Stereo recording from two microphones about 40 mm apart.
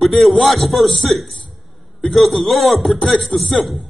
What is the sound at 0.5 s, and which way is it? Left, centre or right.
Speech, centre.